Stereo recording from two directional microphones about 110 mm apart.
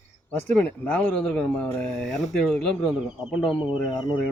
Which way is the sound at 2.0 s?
Centre (ahead or behind).